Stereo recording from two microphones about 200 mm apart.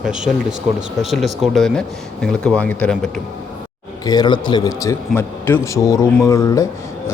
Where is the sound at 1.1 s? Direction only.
Centre (ahead or behind).